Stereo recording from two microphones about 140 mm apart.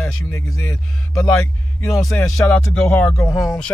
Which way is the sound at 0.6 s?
10° left (ahead or behind).